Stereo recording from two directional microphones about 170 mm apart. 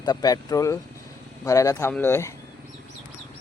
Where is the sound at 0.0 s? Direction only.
25° left (ahead or behind).